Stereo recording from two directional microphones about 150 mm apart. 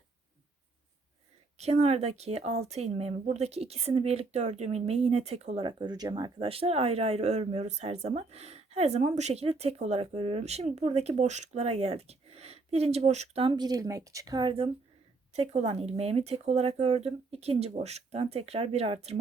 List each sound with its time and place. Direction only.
1.5 s speech: 45° right (ahead or behind)
15.3 s speech: 45° right (ahead or behind)